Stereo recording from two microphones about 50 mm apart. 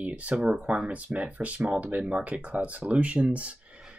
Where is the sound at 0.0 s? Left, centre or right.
Right.